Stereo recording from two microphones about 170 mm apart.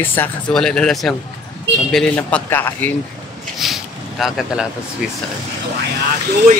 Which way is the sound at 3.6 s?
Centre (ahead or behind).